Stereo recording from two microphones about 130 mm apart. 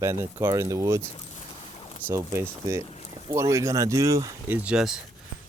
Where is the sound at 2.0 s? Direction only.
20° right (ahead or behind).